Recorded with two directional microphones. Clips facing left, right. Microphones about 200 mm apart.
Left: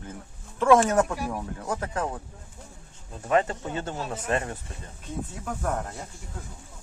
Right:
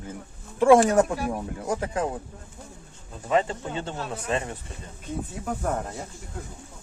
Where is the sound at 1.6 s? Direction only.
10° right (ahead or behind).